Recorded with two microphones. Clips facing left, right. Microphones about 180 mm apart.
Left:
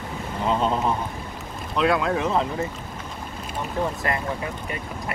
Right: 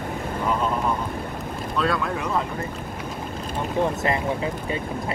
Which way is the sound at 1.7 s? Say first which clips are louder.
Left 4 dB; 20° left (ahead or behind).